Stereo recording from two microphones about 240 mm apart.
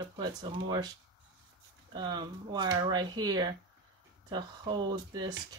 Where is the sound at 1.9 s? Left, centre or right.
Centre.